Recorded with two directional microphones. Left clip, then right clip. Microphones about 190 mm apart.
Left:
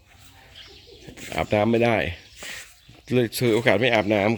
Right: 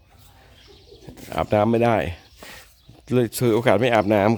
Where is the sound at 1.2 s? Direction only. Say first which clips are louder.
Right 2 dB; 5° right (ahead or behind).